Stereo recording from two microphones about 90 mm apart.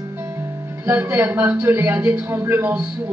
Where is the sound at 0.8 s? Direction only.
25° right (ahead or behind).